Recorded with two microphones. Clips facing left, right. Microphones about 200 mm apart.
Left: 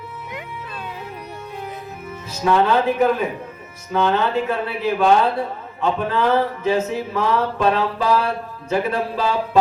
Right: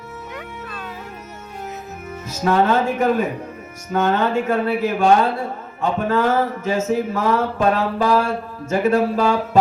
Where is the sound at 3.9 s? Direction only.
50° right (ahead or behind).